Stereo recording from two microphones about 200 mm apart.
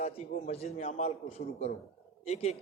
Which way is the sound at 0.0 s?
30° left (ahead or behind).